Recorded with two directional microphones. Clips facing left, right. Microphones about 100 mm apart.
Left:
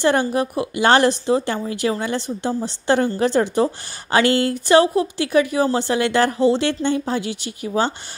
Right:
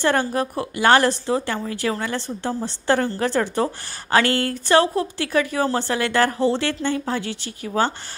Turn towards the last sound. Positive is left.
turn(degrees=20)  # may be behind; listen again after turning